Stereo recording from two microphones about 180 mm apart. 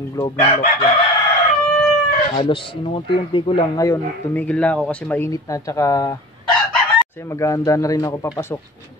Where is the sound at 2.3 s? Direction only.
25° left (ahead or behind).